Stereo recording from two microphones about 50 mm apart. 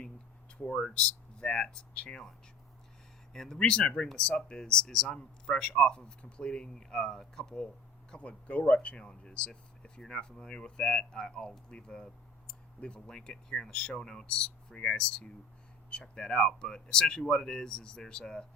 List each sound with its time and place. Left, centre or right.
0.8 s speech: centre
3.3 s speech: centre
8.1 s speech: left